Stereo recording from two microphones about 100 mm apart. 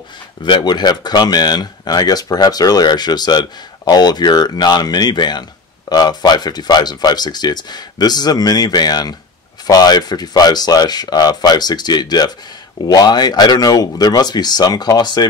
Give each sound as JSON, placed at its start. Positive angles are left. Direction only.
{"t": 0.4, "sound": "speech", "side_deg": 50}